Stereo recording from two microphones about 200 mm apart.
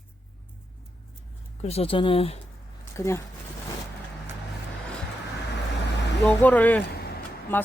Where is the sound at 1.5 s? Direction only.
30° left (ahead or behind).